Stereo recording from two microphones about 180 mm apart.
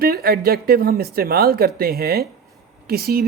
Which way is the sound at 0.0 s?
60° right (ahead or behind).